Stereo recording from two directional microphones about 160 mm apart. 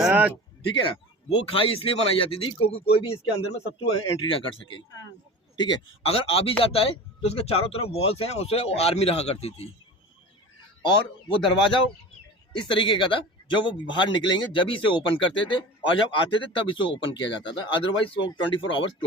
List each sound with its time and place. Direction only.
0.0 s a sound: 10° right (ahead or behind)
0.6 s speech: 30° left (ahead or behind)
12.5 s speech: 30° left (ahead or behind)